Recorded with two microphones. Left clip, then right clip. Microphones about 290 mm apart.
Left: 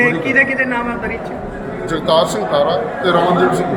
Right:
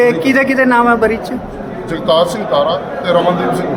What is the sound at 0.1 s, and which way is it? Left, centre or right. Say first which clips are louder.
Speech: right 2 dB; centre.